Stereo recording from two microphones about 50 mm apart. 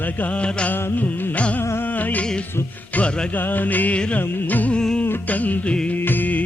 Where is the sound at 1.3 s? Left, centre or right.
Left.